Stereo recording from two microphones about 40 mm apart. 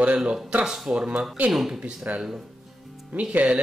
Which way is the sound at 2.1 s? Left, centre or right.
Right.